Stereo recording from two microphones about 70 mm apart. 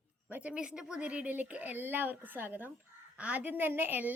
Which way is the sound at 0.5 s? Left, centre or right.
Centre.